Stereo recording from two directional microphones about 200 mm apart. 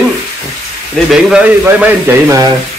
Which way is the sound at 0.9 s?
5° right (ahead or behind).